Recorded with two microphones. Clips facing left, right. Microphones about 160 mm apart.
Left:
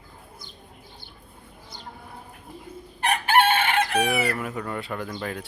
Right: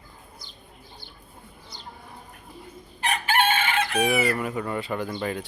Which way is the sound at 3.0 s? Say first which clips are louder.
Left 4 dB; 60° left (ahead or behind).